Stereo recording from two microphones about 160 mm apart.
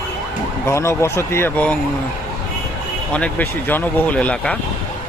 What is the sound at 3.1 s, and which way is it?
Speech, 10° left (ahead or behind).